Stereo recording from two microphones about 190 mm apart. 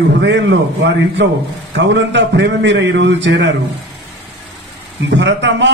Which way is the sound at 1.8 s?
70° right (ahead or behind).